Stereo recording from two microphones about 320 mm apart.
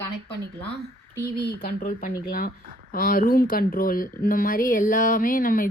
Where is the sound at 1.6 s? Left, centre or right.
Left.